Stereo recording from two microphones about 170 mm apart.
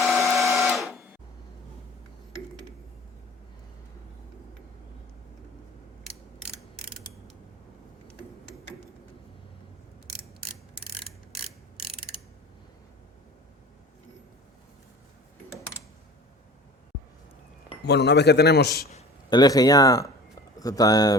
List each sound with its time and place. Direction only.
0.0 s printer: centre (ahead or behind)
0.3 s a sound: centre (ahead or behind)
17.8 s a man's voice: 80° left
19.3 s speech: 25° left (ahead or behind)